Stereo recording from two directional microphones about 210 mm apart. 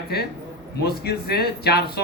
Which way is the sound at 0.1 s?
50° left (ahead or behind).